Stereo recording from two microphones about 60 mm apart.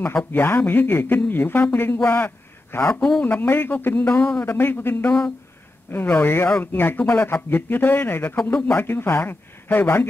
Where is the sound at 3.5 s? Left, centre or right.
Left.